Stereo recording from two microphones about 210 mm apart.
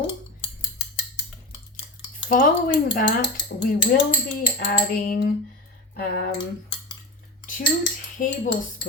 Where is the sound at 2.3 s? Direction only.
40° left (ahead or behind).